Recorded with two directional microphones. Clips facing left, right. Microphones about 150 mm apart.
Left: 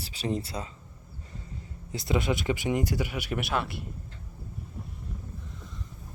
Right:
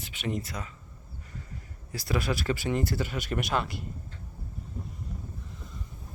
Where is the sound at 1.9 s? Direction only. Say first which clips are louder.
Left 2 dB; 20° left (ahead or behind); by 3.8 s 5° left (ahead or behind).